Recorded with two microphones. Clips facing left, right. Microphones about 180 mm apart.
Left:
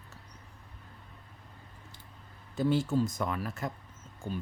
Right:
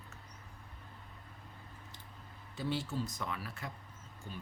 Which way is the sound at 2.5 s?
45° left (ahead or behind).